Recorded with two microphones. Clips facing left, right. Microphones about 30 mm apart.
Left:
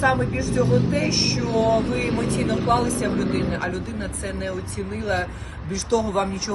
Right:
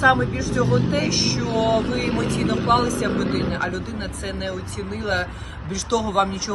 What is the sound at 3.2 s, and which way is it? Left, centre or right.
Speech, right.